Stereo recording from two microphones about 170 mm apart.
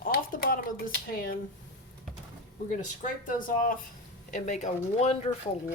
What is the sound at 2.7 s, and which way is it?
Speech, 45° left (ahead or behind).